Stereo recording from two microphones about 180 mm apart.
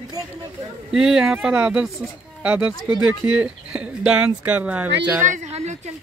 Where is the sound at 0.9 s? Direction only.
Centre (ahead or behind).